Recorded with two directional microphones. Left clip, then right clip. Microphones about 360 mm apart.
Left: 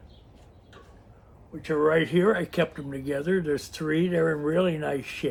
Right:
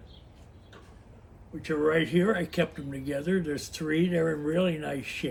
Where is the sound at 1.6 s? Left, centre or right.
Centre.